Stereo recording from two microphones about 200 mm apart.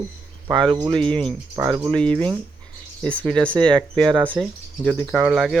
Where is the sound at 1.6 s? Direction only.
15° right (ahead or behind).